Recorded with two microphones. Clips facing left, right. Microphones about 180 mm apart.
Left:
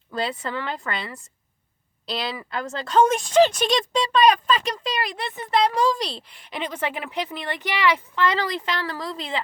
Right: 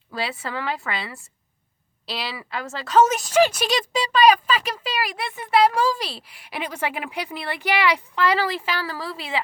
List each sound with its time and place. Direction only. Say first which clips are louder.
0.1 s a woman's voice: left 2 dB; 5° right (ahead or behind)